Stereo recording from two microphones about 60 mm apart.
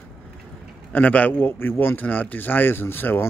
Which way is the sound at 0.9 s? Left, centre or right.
Left.